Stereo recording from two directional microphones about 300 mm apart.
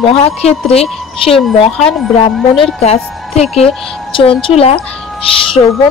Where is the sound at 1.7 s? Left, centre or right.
Centre.